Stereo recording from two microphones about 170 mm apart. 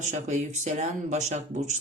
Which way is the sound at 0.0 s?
45° right (ahead or behind).